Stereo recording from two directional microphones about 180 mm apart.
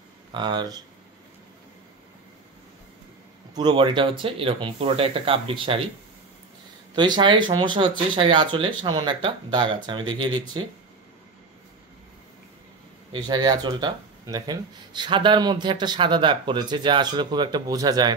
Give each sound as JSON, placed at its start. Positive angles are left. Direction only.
{"t": 0.3, "sound": "speech", "side_deg": -25}
{"t": 3.5, "sound": "speech", "side_deg": -25}
{"t": 7.0, "sound": "speech", "side_deg": -25}
{"t": 13.1, "sound": "speech", "side_deg": -25}